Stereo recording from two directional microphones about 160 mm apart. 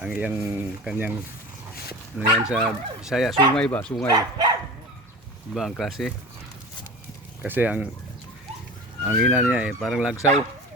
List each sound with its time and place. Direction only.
0.0 s speech: 10° right (ahead or behind)
2.1 s speech: 5° right (ahead or behind)
3.5 s speech: 10° left (ahead or behind)
4.1 s speech: 25° right (ahead or behind)
5.5 s speech: centre (ahead or behind)
7.4 s speech: 10° right (ahead or behind)
9.0 s speech: 5° right (ahead or behind)